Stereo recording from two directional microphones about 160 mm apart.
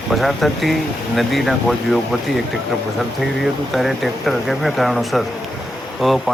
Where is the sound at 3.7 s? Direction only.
Centre (ahead or behind).